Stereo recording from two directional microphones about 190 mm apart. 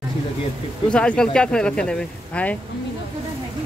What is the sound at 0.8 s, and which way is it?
Speech, 5° left (ahead or behind).